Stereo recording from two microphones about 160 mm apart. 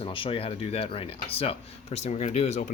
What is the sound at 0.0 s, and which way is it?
Speech, 35° left (ahead or behind).